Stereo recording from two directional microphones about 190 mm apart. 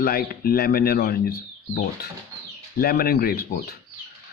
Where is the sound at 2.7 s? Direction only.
55° left (ahead or behind).